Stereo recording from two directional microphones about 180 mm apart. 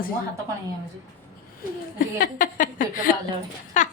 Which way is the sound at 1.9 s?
50° left (ahead or behind).